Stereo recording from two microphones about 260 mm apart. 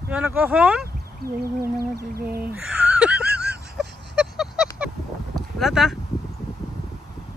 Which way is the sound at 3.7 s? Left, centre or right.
Centre.